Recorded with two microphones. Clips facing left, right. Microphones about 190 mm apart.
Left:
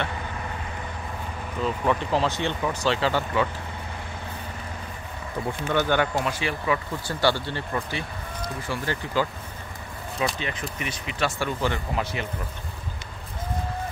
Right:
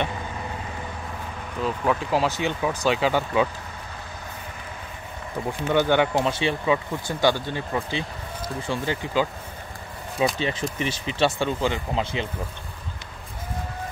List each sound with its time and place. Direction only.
1.6 s speech: 5° right (ahead or behind)
5.7 s speech: 15° right (ahead or behind)
10.4 s speech: 30° right (ahead or behind)